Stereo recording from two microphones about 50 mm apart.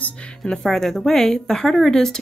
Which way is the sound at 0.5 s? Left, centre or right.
Centre.